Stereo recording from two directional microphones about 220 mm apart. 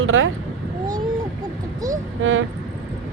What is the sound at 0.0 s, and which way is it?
Speech, 65° right (ahead or behind).